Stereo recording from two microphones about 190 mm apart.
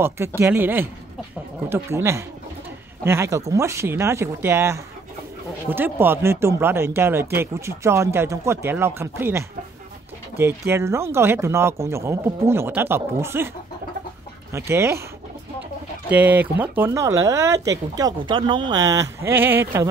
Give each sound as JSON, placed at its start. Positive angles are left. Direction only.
{"t": 0.0, "sound": "speech", "side_deg": -10}
{"t": 14.5, "sound": "speech", "side_deg": -15}
{"t": 16.1, "sound": "speech", "side_deg": -10}